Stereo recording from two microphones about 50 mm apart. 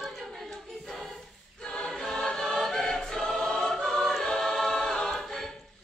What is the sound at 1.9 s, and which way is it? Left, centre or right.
Choir, centre.